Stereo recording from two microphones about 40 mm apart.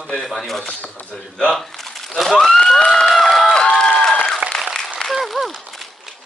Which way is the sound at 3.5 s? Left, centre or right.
Centre.